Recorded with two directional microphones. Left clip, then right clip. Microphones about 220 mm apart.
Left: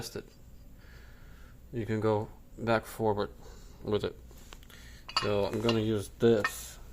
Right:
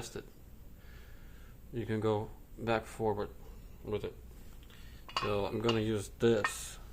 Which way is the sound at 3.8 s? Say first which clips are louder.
Left 6 dB; 30° left (ahead or behind).